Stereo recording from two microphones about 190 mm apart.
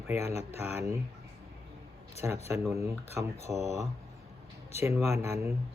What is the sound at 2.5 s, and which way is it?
Speech, 15° right (ahead or behind).